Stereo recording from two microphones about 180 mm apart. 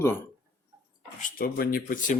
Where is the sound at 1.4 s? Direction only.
55° left (ahead or behind).